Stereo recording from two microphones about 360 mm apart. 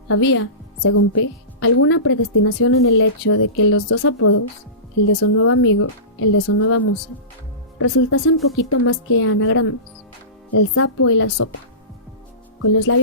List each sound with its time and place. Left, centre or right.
0.1 s a woman's voice: left
12.6 s a woman's voice: left